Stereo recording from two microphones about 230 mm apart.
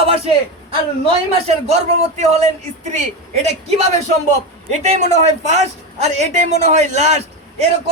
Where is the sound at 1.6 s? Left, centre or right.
Right.